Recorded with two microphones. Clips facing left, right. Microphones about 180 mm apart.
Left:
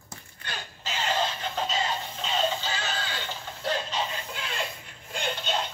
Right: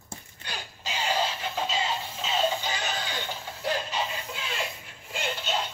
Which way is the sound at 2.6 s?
15° right (ahead or behind).